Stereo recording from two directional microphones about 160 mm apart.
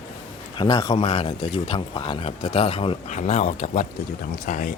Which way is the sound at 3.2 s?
45° left (ahead or behind).